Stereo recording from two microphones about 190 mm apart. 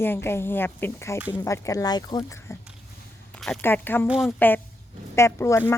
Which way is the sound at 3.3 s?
5° left (ahead or behind).